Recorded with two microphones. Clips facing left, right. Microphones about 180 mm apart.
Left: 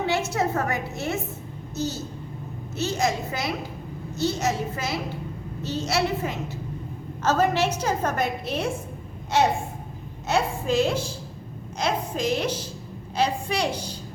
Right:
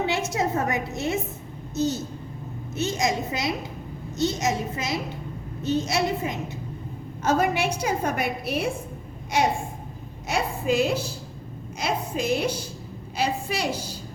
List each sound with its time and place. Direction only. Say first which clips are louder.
0.0 s a woman's voice: left 1 dB; 20° right (ahead or behind)
10.2 s a woman's voice: left 1 dB; 10° right (ahead or behind)